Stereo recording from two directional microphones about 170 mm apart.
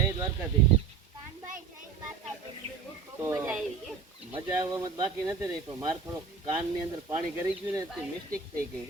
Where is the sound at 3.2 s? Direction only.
20° right (ahead or behind).